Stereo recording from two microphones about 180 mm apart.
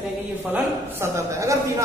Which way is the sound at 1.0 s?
15° right (ahead or behind).